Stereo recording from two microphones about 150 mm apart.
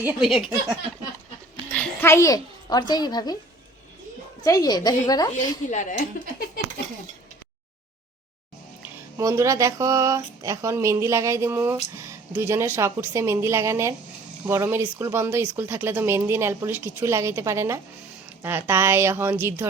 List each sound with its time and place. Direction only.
0.0 s a sound: 5° right (ahead or behind)
1.7 s a child's voice: 10° left (ahead or behind); by 3.3 s 25° left (ahead or behind)
4.4 s a woman's voice: 25° left (ahead or behind)
5.7 s speech: 55° left (ahead or behind)
9.1 s speech: 20° right (ahead or behind)